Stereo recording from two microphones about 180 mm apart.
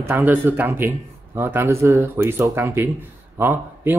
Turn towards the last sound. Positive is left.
turn(degrees=-10)  # may be behind; listen again after turning